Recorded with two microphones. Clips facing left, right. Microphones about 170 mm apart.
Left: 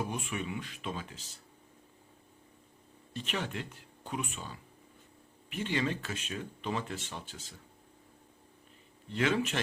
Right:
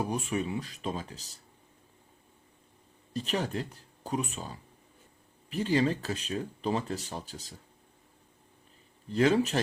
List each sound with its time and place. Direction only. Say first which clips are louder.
0.0 s speech: right 5 dB; 35° right (ahead or behind)
3.1 s speech: right 5 dB; 40° right (ahead or behind)
9.0 s speech: right 6 dB; 40° right (ahead or behind)